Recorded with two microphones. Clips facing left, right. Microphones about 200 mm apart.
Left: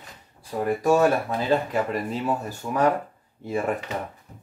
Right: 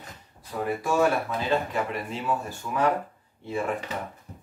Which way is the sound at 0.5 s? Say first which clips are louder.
Left 3 dB; 30° left (ahead or behind).